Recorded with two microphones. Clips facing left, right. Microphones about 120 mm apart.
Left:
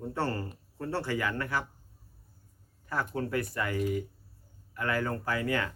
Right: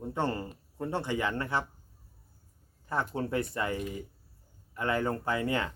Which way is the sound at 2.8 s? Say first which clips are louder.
Right 1 dB; 25° right (ahead or behind).